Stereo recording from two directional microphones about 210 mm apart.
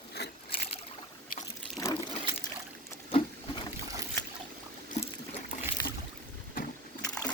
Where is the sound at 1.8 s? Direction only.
15° left (ahead or behind).